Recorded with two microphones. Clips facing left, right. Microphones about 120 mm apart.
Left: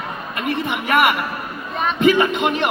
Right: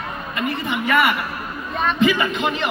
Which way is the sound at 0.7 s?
60° left (ahead or behind).